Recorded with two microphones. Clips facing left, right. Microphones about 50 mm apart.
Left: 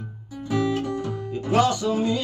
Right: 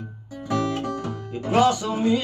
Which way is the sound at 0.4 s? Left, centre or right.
Right.